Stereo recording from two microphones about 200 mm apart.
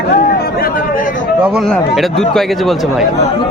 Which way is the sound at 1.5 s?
Centre (ahead or behind).